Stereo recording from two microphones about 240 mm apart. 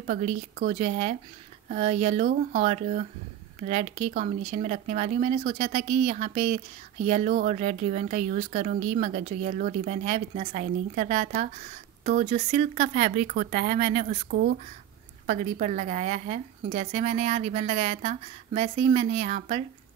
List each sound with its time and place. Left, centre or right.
0.0 s a woman's voice: right
15.2 s a woman's voice: right